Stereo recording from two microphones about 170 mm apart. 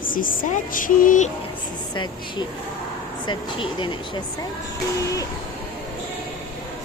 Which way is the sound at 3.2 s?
25° left (ahead or behind).